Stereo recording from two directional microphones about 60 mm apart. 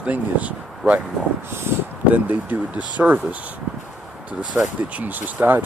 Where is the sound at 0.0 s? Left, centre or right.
Right.